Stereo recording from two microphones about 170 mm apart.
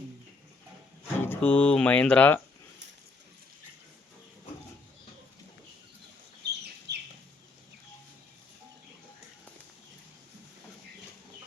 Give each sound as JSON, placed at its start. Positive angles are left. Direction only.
{"t": 1.2, "sound": "speech", "side_deg": 10}
{"t": 6.4, "sound": "chicken", "side_deg": -80}